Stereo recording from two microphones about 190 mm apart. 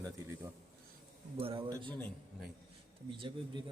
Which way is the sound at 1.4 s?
30° right (ahead or behind).